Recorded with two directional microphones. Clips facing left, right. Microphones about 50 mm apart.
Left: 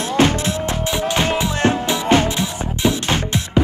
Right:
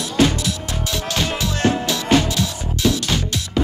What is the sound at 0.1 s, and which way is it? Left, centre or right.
Music, left.